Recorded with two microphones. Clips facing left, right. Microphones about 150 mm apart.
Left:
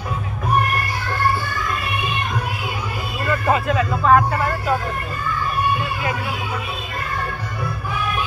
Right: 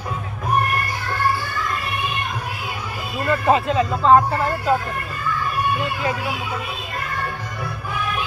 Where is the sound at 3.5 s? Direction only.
25° right (ahead or behind).